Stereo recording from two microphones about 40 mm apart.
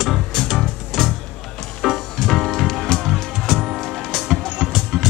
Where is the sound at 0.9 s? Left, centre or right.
Centre.